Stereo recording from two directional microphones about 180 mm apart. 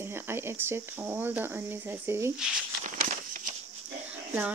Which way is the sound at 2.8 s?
45° right (ahead or behind).